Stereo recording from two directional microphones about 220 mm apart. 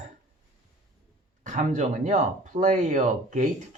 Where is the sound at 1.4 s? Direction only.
35° right (ahead or behind).